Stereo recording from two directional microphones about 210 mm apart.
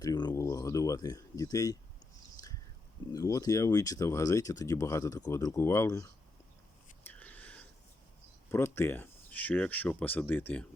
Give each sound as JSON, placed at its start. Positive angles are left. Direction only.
{"t": 0.0, "sound": "speech", "side_deg": 20}
{"t": 3.1, "sound": "speech", "side_deg": 15}
{"t": 7.0, "sound": "a sound", "side_deg": 10}
{"t": 8.4, "sound": "speech", "side_deg": 10}